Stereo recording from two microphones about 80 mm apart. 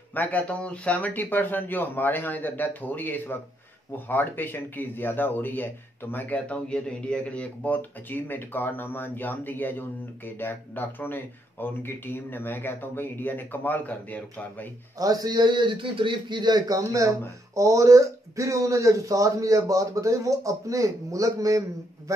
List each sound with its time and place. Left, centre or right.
0.1 s speech: left
15.0 s a man's voice: right